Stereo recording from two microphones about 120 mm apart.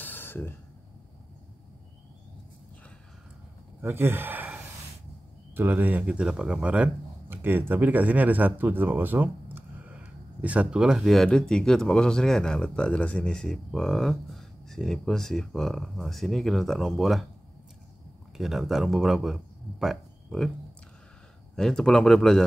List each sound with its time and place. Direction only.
0.0 s a sound: 15° left (ahead or behind)
3.8 s speech: 20° right (ahead or behind); by 17.3 s centre (ahead or behind)
18.4 s speech: centre (ahead or behind)
21.5 s speech: 5° left (ahead or behind)